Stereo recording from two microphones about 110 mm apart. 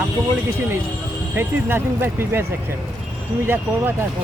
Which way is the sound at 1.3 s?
20° right (ahead or behind).